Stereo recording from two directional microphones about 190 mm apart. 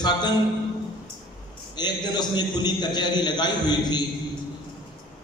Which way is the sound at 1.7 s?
20° left (ahead or behind).